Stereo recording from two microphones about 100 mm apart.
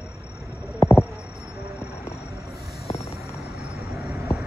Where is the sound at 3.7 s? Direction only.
25° right (ahead or behind).